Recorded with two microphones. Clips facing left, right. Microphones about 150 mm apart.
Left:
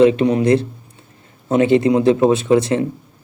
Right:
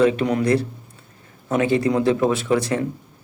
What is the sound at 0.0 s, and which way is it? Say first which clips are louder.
Speech: left 5 dB; 20° left (ahead or behind).